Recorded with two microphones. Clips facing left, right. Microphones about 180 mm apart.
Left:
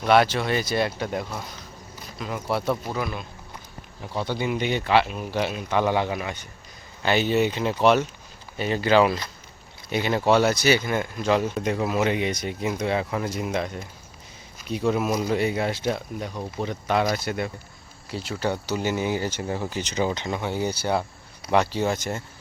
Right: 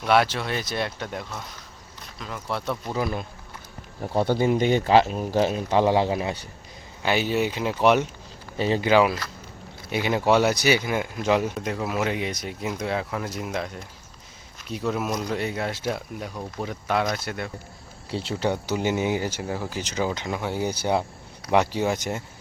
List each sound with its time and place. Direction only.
0.0 s speech: centre (ahead or behind)
2.9 s speech: 35° right (ahead or behind)
4.0 s speech: 50° right (ahead or behind); by 6.5 s 30° right (ahead or behind)
7.0 s speech: 10° right (ahead or behind)
8.5 s speech: 30° right (ahead or behind)
8.8 s speech: 10° right (ahead or behind)
11.6 s speech: centre (ahead or behind)
18.1 s speech: 30° right (ahead or behind)
18.4 s speech: 15° right (ahead or behind)